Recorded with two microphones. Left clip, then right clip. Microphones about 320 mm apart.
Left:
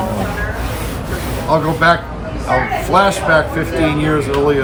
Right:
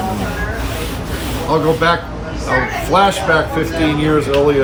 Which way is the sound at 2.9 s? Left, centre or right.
Centre.